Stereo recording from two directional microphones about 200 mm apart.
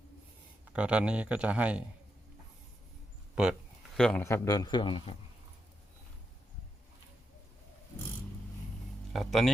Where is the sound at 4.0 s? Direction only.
5° left (ahead or behind); by 5.2 s 25° left (ahead or behind).